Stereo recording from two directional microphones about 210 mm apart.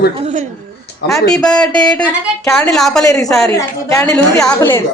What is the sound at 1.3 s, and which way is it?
A woman's voice, 5° left (ahead or behind).